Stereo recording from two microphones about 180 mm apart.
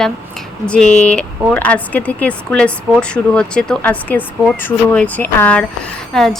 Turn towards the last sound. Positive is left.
turn(degrees=0)  # may be behind; listen again after turning